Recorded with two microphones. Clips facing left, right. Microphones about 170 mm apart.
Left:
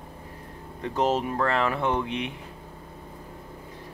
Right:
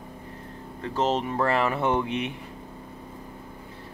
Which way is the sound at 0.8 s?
15° left (ahead or behind).